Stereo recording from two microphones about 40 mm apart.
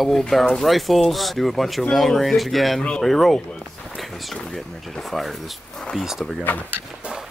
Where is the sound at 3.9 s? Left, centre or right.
Centre.